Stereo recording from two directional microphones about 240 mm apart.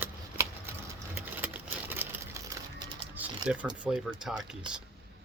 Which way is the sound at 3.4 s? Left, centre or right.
Centre.